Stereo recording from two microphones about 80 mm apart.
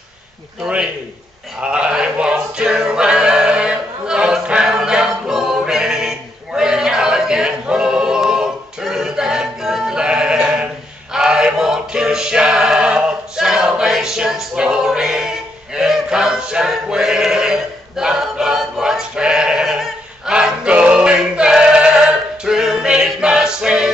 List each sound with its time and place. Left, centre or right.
0.6 s a man's voice: centre
1.6 s music: centre
11.1 s chant: centre